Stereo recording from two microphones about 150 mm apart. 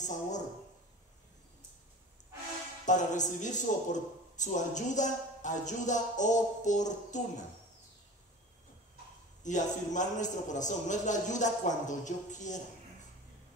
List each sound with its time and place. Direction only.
0.0 s speech: 55° left (ahead or behind)
2.8 s a man's voice: 55° left (ahead or behind)
9.4 s a man's voice: 55° left (ahead or behind)